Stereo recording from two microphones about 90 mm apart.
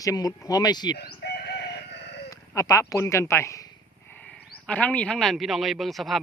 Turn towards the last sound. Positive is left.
turn(degrees=0)  # may be behind; listen again after turning